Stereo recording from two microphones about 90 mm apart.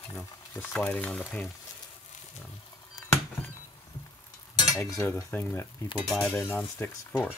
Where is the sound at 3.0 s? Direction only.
45° left (ahead or behind).